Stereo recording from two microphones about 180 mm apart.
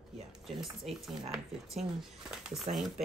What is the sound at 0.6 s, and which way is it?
Speech, centre (ahead or behind).